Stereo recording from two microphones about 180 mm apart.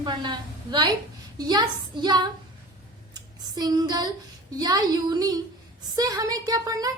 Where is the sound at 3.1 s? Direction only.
20° right (ahead or behind).